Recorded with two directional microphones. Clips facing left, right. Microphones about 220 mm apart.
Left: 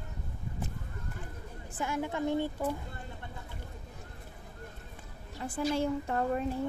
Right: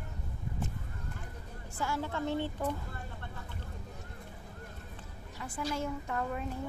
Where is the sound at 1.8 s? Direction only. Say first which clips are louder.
Left 2 dB; 15° left (ahead or behind).